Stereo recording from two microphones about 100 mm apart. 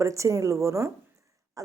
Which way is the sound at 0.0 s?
30° right (ahead or behind).